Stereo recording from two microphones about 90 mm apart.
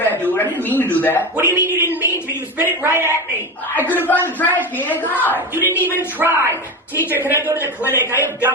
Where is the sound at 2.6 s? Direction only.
25° right (ahead or behind).